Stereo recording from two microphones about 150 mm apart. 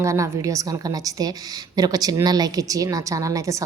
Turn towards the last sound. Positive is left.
turn(degrees=-20)  # may be behind; listen again after turning